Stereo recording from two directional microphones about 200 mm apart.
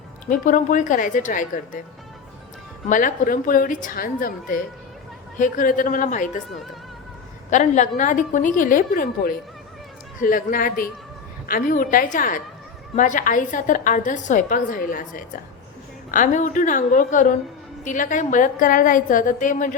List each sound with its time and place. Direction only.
0.3 s a woman's voice: 40° left (ahead or behind)
2.9 s a woman's voice: 45° left (ahead or behind)
7.5 s a woman's voice: 40° left (ahead or behind)